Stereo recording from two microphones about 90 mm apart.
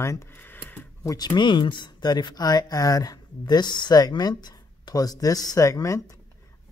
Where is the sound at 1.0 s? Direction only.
45° left (ahead or behind).